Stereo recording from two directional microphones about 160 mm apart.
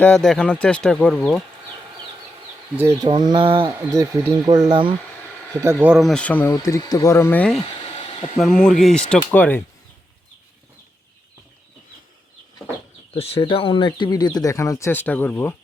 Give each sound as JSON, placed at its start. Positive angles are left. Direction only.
{"t": 0.0, "sound": "speech", "side_deg": 5}
{"t": 2.7, "sound": "speech", "side_deg": -15}
{"t": 3.1, "sound": "speech", "side_deg": -30}
{"t": 3.7, "sound": "speech", "side_deg": -15}
{"t": 5.5, "sound": "speech", "side_deg": -15}
{"t": 5.9, "sound": "speech", "side_deg": 0}
{"t": 6.7, "sound": "speech", "side_deg": 20}
{"t": 13.1, "sound": "speech", "side_deg": 35}